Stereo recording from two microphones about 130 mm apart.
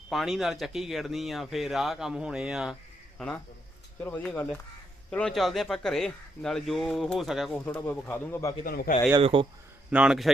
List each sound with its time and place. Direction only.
0.1 s speech: centre (ahead or behind)
3.2 s speech: 10° left (ahead or behind)
7.7 s speech: 15° left (ahead or behind)
8.9 s speech: 90° left
9.2 s speech: 40° right (ahead or behind)
9.9 s speech: 5° right (ahead or behind)